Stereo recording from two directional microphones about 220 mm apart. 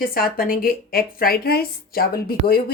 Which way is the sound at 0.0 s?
40° left (ahead or behind).